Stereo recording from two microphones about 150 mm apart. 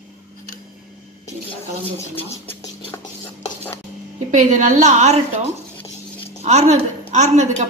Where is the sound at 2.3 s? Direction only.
20° left (ahead or behind).